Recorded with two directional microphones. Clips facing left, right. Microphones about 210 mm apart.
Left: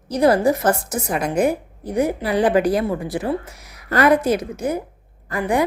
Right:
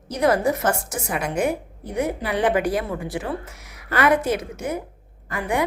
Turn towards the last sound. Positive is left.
turn(degrees=35)  # may be behind; listen again after turning